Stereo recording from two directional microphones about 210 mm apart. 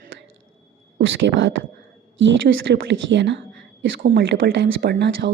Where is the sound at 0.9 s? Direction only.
65° right (ahead or behind).